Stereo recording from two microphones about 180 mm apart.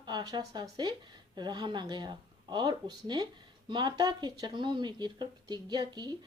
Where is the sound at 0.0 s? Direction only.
25° right (ahead or behind).